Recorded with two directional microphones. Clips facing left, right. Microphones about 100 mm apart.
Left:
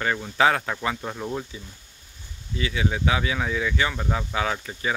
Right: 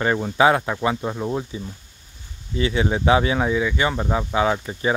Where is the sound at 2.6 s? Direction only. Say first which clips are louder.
Right 5 dB; 30° right (ahead or behind).